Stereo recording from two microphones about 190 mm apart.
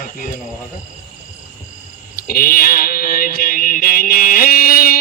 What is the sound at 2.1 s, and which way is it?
A man's voice, 50° left (ahead or behind).